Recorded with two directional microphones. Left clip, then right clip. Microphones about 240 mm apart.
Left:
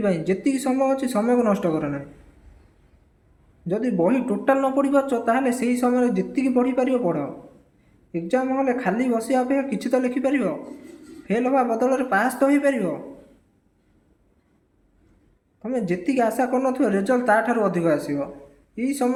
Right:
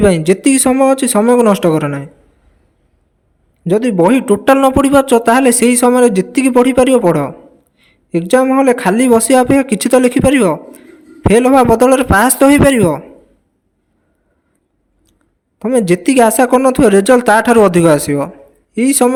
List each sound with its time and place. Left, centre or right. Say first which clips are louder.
0.0 s speech: right 12 dB; right
3.7 s speech: right 11 dB; right
15.5 s speech: right 13 dB; right